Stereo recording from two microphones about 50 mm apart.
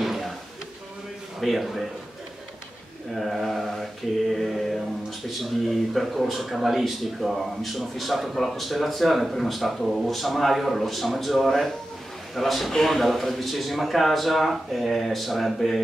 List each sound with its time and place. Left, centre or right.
0.0 s a sound: centre
1.4 s speech: centre
3.2 s mantra: centre
5.4 s speech: centre